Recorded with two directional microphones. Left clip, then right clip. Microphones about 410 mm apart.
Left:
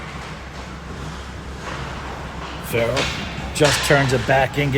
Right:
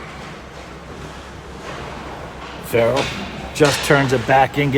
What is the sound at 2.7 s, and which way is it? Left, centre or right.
Speech, centre.